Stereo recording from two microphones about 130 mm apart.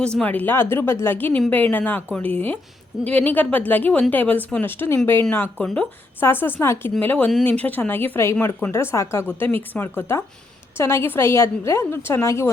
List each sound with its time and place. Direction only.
0.0 s a woman's voice: 10° left (ahead or behind)